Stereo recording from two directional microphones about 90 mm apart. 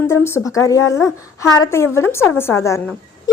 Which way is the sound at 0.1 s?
30° left (ahead or behind).